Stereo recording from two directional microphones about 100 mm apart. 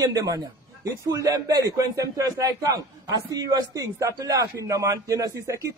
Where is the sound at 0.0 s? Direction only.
35° right (ahead or behind).